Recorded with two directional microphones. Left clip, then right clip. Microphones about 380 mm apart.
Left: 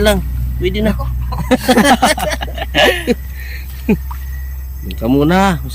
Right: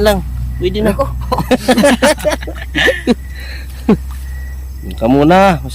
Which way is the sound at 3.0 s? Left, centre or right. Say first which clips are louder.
Right 2 dB; centre.